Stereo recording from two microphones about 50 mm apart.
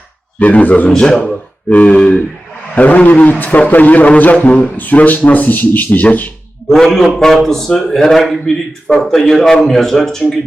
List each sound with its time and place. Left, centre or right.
0.3 s speech: left
0.9 s a man's voice: centre; by 6.3 s left
6.7 s a man's voice: centre